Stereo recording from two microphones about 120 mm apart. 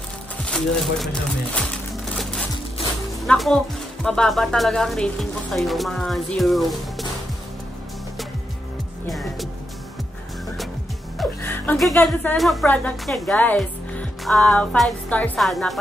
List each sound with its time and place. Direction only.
0.5 s a woman's voice: 5° left (ahead or behind)
3.3 s a woman's voice: 5° left (ahead or behind)
9.1 s speech: centre (ahead or behind)
11.4 s music: 20° left (ahead or behind)
11.9 s speech: 15° left (ahead or behind)
12.4 s a woman's voice: centre (ahead or behind)
13.6 s music: centre (ahead or behind)
15.4 s a woman's voice: centre (ahead or behind)